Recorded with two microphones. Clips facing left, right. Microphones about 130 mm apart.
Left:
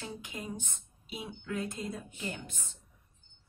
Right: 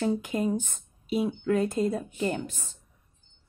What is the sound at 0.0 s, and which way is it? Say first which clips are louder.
A woman's voice: right 15 dB; 50° right (ahead or behind).